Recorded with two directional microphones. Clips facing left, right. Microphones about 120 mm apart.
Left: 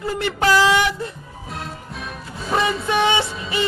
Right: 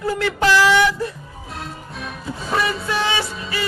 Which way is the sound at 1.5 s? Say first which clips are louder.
Even; centre (ahead or behind).